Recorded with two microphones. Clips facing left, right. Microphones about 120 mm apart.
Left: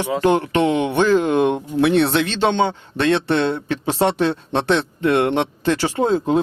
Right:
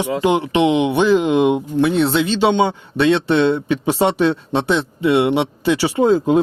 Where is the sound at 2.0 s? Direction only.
Centre (ahead or behind).